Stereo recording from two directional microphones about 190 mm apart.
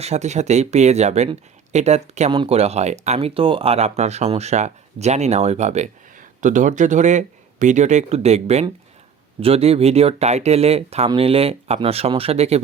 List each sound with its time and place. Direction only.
0.0 s speech: 35° right (ahead or behind)